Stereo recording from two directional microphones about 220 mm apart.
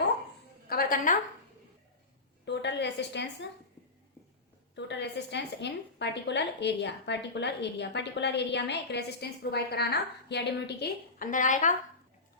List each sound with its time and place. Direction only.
0.7 s music: 40° left (ahead or behind)
2.4 s a sound: 50° left (ahead or behind)
4.7 s a woman's voice: 50° left (ahead or behind); by 11.7 s 35° left (ahead or behind)